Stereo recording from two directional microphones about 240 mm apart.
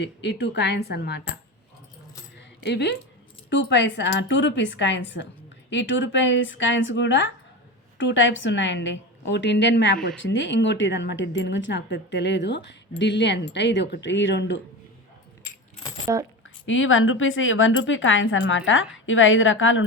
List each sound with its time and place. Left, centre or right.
0.0 s speech: left
2.6 s speech: left
16.1 s speech: centre
16.6 s speech: left